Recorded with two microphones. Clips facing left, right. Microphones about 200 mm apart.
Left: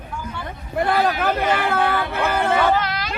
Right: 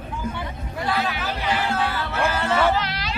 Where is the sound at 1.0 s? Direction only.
40° left (ahead or behind).